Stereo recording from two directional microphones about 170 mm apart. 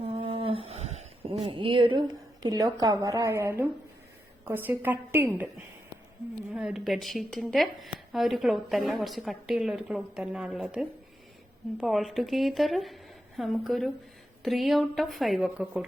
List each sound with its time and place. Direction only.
0.0 s a sound: 30° right (ahead or behind); by 3.7 s 15° right (ahead or behind)
4.4 s a woman's voice: 10° right (ahead or behind)
6.5 s speech: 5° right (ahead or behind)